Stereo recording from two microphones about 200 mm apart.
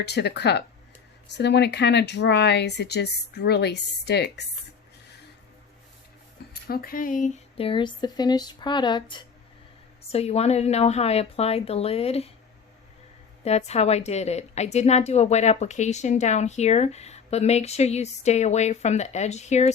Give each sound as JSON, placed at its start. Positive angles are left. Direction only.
{"t": 0.0, "sound": "speech", "side_deg": 55}
{"t": 6.5, "sound": "a woman's voice", "side_deg": 50}
{"t": 13.4, "sound": "a woman's voice", "side_deg": 35}